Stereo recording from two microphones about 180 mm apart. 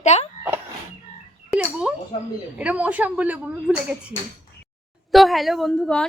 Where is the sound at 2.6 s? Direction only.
10° right (ahead or behind).